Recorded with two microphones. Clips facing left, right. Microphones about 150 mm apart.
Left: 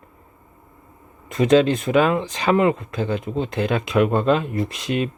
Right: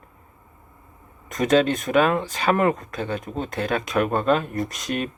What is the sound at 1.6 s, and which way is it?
Speech, 30° left (ahead or behind).